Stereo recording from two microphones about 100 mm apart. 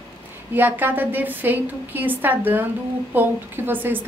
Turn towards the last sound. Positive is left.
turn(degrees=-20)  # may be behind; listen again after turning